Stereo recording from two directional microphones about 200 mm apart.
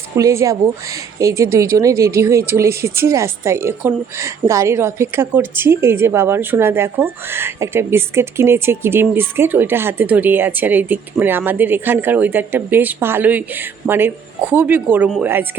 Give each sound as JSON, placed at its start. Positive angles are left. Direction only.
{"t": 0.2, "sound": "a woman's voice", "side_deg": -15}